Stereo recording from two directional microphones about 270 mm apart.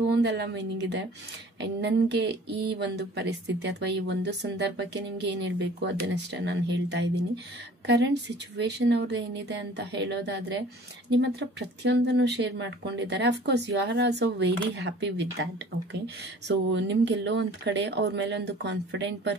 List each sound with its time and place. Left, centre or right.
0.2 s speech: right
16.4 s speech: right